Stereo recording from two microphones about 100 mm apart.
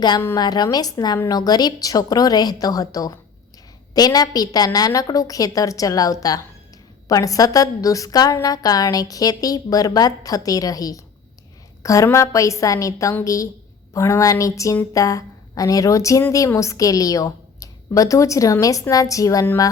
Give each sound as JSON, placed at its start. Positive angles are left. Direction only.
{"t": 0.3, "sound": "a woman's voice", "side_deg": 45}